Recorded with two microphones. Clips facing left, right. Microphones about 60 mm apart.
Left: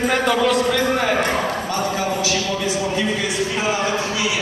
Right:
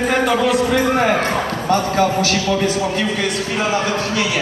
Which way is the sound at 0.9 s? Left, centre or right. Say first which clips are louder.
Right 3 dB; right.